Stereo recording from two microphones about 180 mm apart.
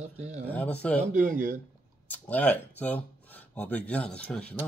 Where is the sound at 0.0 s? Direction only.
40° right (ahead or behind).